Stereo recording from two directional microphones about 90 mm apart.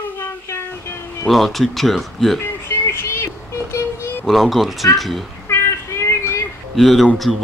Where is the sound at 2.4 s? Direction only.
25° left (ahead or behind).